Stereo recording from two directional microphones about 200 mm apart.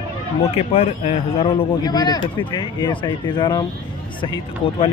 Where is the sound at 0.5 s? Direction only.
35° left (ahead or behind).